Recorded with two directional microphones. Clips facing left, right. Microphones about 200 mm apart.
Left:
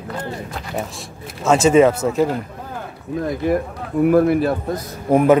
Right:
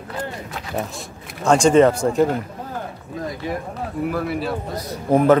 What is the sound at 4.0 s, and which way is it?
Speech, 50° left (ahead or behind).